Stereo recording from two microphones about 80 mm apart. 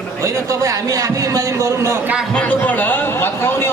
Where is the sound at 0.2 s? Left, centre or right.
Right.